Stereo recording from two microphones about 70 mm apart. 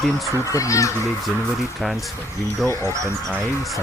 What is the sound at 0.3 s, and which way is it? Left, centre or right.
Speech, left.